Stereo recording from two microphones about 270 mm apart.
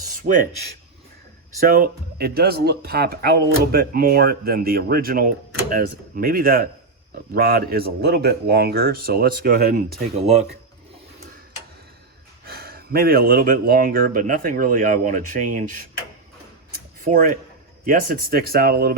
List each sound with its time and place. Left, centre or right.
0.3 s speech: right
1.6 s speech: right
12.5 s speech: right
17.0 s speech: right